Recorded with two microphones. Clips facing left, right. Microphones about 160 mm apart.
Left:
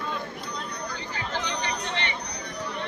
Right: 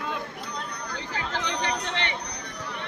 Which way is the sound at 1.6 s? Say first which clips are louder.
Right 1 dB; 75° right (ahead or behind).